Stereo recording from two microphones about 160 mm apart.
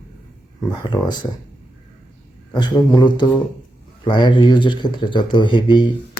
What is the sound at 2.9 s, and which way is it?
Speech, 30° left (ahead or behind).